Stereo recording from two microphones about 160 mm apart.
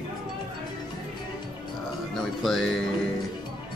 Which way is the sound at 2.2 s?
Centre (ahead or behind).